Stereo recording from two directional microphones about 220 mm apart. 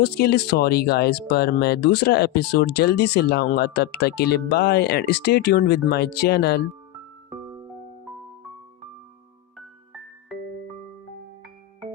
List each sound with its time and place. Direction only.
0.0 s speech: 45° left (ahead or behind)
9.6 s music: centre (ahead or behind)